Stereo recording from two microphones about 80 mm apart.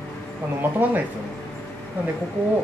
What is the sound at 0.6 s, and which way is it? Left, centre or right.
Speech, right.